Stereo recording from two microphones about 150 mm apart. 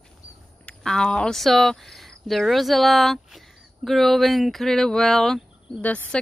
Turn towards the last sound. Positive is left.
turn(degrees=10)  # may be behind; listen again after turning